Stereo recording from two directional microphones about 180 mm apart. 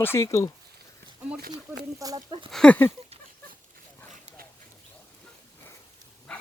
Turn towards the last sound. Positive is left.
turn(degrees=5)  # may be behind; listen again after turning